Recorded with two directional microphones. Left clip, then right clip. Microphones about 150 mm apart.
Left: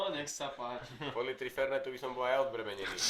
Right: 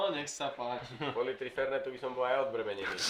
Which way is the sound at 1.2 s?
60° left (ahead or behind).